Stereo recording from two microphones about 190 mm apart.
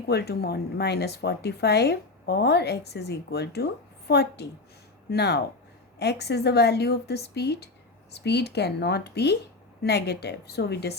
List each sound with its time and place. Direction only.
0.1 s speech: 55° left (ahead or behind)